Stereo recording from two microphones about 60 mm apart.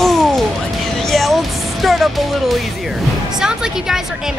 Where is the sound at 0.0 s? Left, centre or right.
Centre.